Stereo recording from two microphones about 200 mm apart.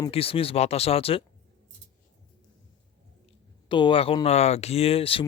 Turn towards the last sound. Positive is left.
turn(degrees=25)  # may be behind; listen again after turning